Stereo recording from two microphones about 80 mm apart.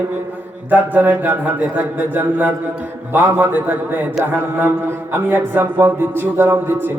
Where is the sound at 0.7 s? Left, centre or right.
Right.